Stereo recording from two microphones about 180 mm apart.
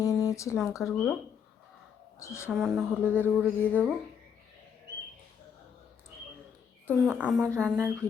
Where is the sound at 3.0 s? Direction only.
10° right (ahead or behind).